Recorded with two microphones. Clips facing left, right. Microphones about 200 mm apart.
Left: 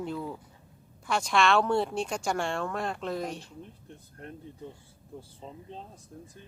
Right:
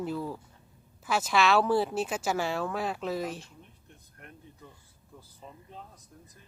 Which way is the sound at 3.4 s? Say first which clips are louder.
Left 8 dB; 35° left (ahead or behind).